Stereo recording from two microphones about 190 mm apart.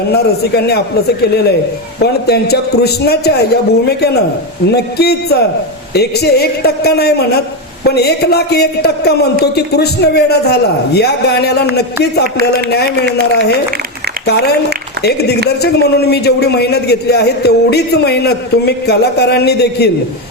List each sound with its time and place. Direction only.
0.1 s a man's voice: 55° left (ahead or behind)
2.0 s a man's voice: 60° left (ahead or behind)
12.7 s a man's voice: 65° left (ahead or behind)